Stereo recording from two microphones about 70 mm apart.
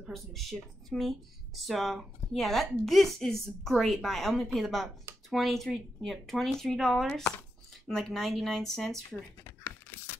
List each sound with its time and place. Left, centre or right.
0.1 s speech: centre
9.6 s keys jangling: left